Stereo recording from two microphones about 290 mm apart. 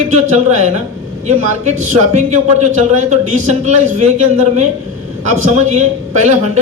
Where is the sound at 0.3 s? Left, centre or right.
Right.